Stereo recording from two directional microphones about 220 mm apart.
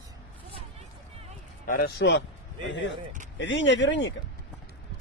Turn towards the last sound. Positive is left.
turn(degrees=55)  # may be behind; listen again after turning